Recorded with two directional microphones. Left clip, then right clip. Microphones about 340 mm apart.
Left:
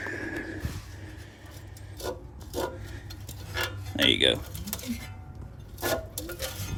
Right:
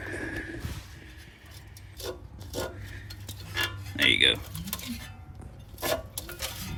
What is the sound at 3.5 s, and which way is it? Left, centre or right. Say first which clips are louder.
Tick-tock: even; centre.